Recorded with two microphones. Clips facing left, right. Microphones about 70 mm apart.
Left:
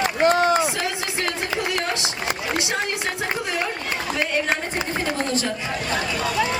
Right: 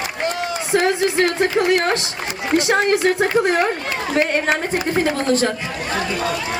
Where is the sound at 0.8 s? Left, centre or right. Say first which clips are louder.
Right 9 dB; right.